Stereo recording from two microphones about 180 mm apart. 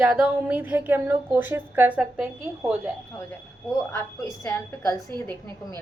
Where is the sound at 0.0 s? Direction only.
5° right (ahead or behind).